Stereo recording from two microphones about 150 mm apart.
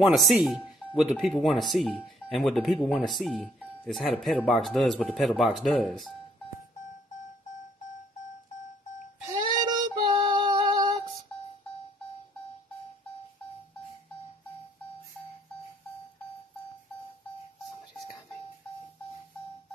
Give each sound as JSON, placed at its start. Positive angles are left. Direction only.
{"t": 0.0, "sound": "speech", "side_deg": 0}
{"t": 9.3, "sound": "female singing", "side_deg": -30}